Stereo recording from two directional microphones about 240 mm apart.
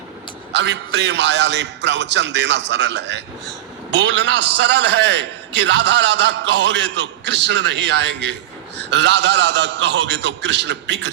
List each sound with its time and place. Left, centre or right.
0.5 s a man's voice: right